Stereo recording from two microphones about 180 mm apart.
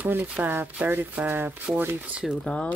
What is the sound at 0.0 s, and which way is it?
Speech, 10° right (ahead or behind).